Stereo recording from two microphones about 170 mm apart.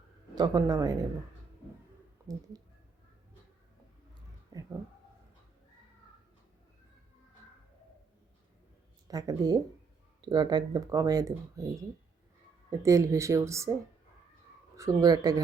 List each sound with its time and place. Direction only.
0.3 s speech: 25° right (ahead or behind)
4.5 s speech: 20° right (ahead or behind)
9.0 s speech: 20° right (ahead or behind)
12.7 s speech: 20° right (ahead or behind)
14.8 s speech: 20° right (ahead or behind)